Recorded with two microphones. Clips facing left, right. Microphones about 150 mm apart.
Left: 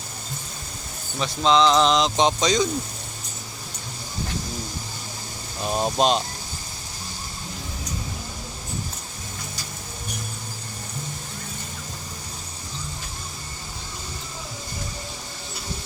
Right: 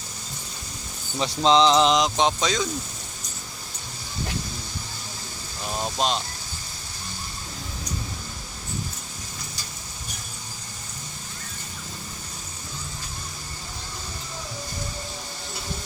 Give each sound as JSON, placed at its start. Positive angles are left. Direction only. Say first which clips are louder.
{"t": 1.2, "sound": "music", "louder": "even", "side_deg": -25}
{"t": 2.1, "sound": "speech", "louder": "left 2 dB", "side_deg": 0}
{"t": 5.6, "sound": "speech", "louder": "left 5 dB", "side_deg": 25}